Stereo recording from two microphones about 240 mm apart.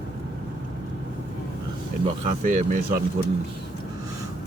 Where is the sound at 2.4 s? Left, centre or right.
Right.